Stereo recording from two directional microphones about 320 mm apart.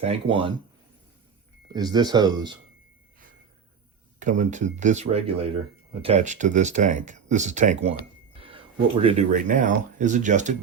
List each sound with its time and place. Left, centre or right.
0.0 s speech: centre
1.6 s speech: centre
4.2 s speech: right